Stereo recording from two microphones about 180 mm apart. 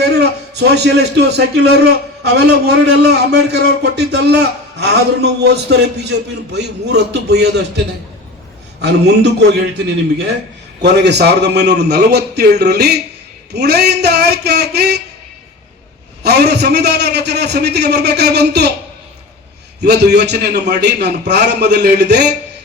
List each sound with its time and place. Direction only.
0.0 s a man's voice: 70° right (ahead or behind)
8.8 s a man's voice: 70° right (ahead or behind)
16.2 s a man's voice: 65° right (ahead or behind)
19.8 s a man's voice: 70° right (ahead or behind)